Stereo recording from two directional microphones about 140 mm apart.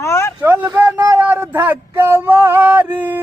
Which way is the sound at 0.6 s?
20° right (ahead or behind).